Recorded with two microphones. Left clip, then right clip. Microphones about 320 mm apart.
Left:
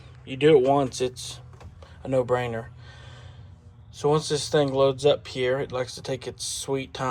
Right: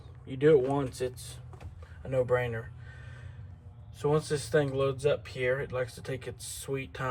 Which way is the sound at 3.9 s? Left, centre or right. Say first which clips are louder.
Left 6 dB; centre.